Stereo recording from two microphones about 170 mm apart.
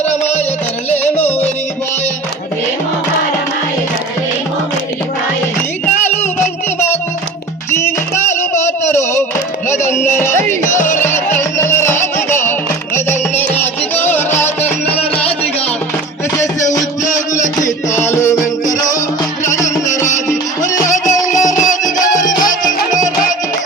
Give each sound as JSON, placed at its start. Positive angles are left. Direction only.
{"t": 6.7, "sound": "music", "side_deg": 15}
{"t": 8.9, "sound": "a sound", "side_deg": 15}
{"t": 10.1, "sound": "music", "side_deg": 15}
{"t": 16.4, "sound": "music", "side_deg": 15}
{"t": 20.6, "sound": "music", "side_deg": 20}
{"t": 20.9, "sound": "music", "side_deg": 45}